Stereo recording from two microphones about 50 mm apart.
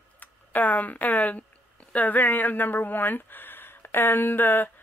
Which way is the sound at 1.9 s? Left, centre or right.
Left.